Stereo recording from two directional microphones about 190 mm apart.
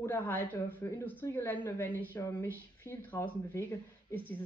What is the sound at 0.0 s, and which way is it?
Speech, 10° left (ahead or behind).